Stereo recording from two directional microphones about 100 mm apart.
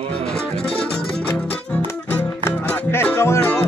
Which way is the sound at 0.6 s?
10° left (ahead or behind).